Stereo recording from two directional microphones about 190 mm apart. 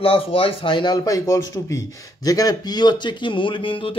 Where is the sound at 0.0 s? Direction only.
30° left (ahead or behind).